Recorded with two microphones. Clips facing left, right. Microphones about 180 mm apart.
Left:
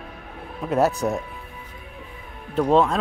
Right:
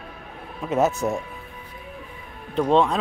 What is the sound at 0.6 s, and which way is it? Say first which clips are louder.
Speech: left 1 dB; centre (ahead or behind).